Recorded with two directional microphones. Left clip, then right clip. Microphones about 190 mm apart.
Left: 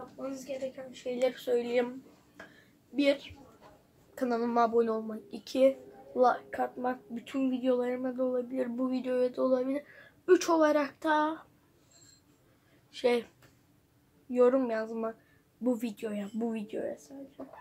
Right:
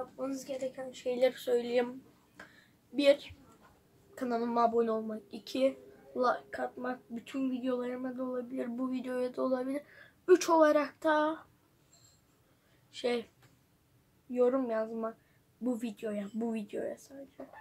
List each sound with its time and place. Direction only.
1.0 s speech: 30° right (ahead or behind)
2.4 s a sound: 20° right (ahead or behind)
3.0 s speech: 25° right (ahead or behind)
4.1 s speech: centre (ahead or behind)
12.9 s speech: centre (ahead or behind)
14.3 s speech: 5° left (ahead or behind)